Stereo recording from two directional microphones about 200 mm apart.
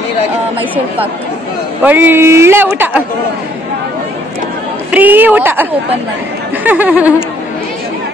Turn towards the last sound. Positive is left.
turn(degrees=-5)  # may be behind; listen again after turning